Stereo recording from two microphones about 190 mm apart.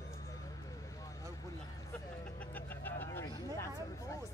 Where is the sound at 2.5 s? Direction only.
10° left (ahead or behind).